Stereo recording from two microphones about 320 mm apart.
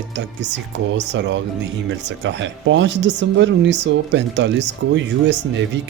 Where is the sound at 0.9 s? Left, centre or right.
Right.